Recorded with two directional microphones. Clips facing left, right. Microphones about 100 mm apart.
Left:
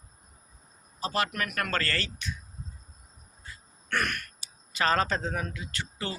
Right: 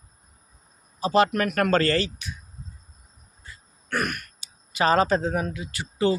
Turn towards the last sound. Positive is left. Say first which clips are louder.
# right 12 dB
turn(degrees=-15)  # may be behind; listen again after turning